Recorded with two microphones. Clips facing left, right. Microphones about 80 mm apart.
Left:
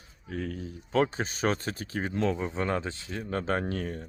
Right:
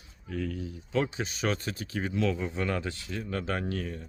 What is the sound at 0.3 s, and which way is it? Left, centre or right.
Speech, left.